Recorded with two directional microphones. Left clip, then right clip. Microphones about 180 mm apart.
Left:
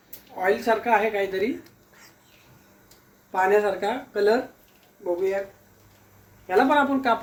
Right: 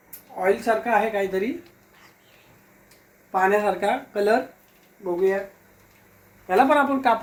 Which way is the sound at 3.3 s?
15° right (ahead or behind).